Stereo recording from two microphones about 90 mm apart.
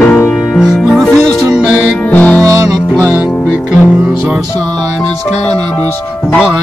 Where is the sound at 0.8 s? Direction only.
Centre (ahead or behind).